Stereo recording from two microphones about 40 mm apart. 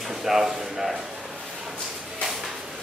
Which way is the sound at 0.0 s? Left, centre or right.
Centre.